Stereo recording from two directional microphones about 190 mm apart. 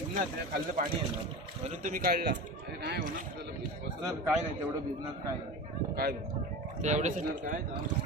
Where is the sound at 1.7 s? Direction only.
45° right (ahead or behind).